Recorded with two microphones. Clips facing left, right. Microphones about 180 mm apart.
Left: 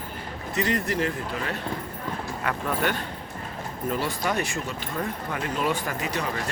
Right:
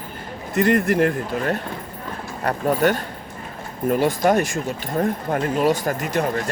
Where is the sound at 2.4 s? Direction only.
40° right (ahead or behind).